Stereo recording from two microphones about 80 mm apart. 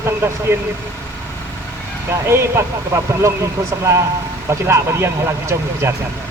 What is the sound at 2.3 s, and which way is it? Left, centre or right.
Speech, right.